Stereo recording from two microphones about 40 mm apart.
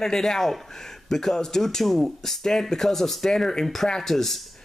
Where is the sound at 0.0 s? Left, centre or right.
Centre.